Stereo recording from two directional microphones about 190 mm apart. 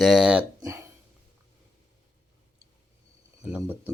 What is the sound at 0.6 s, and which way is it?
Speech, 15° right (ahead or behind).